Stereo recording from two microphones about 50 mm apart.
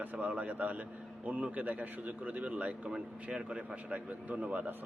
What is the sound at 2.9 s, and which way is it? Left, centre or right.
A man's voice, centre.